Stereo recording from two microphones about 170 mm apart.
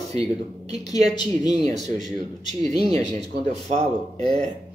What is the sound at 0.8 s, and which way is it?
Speech, 40° right (ahead or behind).